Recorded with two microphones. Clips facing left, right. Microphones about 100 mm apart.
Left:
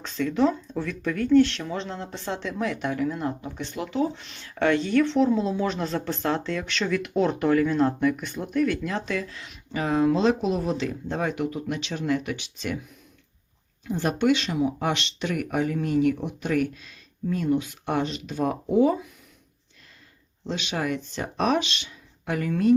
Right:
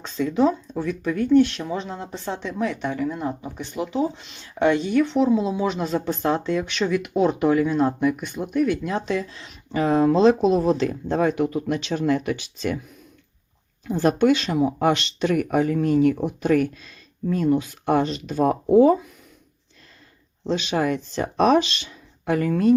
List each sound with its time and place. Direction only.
0.0 s speech: 15° right (ahead or behind); by 12.8 s 40° right (ahead or behind)
13.8 s speech: 40° right (ahead or behind)
20.5 s speech: 35° right (ahead or behind)